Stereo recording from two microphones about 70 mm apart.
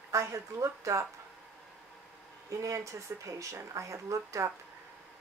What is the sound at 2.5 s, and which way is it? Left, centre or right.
Speech, right.